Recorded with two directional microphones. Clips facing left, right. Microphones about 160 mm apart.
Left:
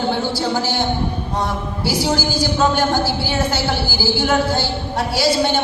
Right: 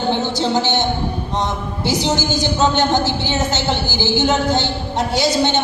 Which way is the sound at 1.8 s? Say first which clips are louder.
Right 1 dB; 20° right (ahead or behind).